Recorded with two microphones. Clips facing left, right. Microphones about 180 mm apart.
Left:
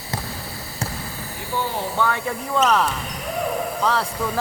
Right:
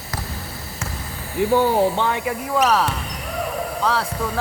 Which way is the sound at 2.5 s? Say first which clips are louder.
Even; 5° right (ahead or behind).